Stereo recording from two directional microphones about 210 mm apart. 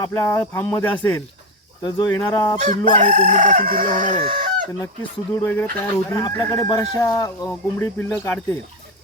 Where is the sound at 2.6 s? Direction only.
40° right (ahead or behind).